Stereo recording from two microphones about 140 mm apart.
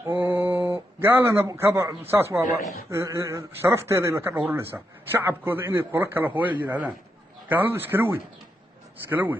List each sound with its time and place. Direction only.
0.0 s a man's voice: 15° right (ahead or behind)